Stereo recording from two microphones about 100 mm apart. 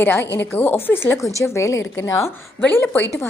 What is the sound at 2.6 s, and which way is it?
Speech, 20° left (ahead or behind).